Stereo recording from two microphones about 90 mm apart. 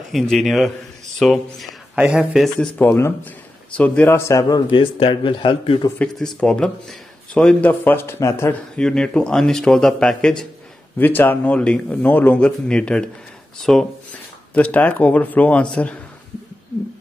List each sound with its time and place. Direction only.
0.1 s a man's voice: centre (ahead or behind)
2.0 s a man's voice: 10° right (ahead or behind)
2.8 s speech: 25° left (ahead or behind)
3.7 s speech: 15° left (ahead or behind)
4.2 s a man's voice: 35° left (ahead or behind)
4.6 s a man's voice: 65° left (ahead or behind)
6.1 s speech: 5° left (ahead or behind); by 8.5 s 30° left (ahead or behind)
8.7 s speech: 10° left (ahead or behind)
11.0 s a man's voice: 20° left (ahead or behind); by 13.8 s 5° left (ahead or behind)
14.5 s speech: 15° left (ahead or behind)